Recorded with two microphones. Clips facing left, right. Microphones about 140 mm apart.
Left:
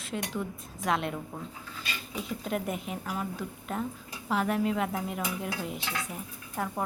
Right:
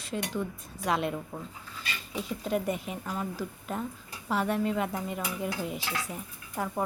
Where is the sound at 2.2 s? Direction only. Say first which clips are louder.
Right 2 dB; centre (ahead or behind).